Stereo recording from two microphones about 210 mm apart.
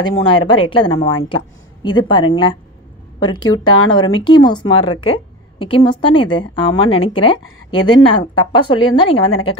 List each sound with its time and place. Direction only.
0.2 s a woman's voice: 25° left (ahead or behind)